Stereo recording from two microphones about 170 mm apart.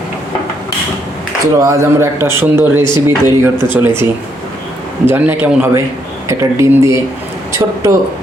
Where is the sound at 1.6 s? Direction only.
15° right (ahead or behind).